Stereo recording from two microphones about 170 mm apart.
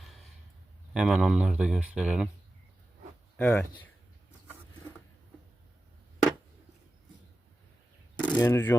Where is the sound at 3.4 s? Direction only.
10° left (ahead or behind).